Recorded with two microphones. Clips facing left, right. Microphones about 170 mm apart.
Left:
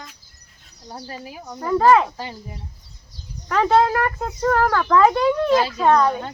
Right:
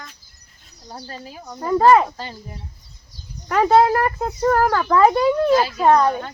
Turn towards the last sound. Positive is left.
turn(degrees=-10)  # may be behind; listen again after turning